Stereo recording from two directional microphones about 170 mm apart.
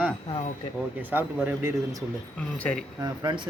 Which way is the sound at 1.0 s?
10° right (ahead or behind).